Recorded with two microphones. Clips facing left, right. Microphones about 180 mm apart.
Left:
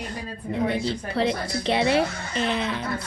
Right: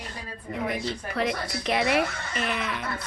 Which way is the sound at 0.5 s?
30° left (ahead or behind).